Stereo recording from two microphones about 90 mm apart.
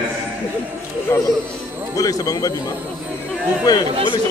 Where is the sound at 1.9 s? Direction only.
40° left (ahead or behind).